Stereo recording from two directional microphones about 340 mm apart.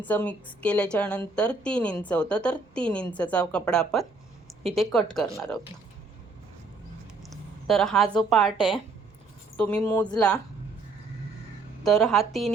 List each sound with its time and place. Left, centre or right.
0.0 s a woman's voice: centre
7.2 s a sound: centre
8.3 s a woman's voice: centre
11.8 s a woman's voice: centre